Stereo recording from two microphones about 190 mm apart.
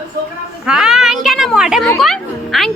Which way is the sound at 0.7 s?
5° right (ahead or behind).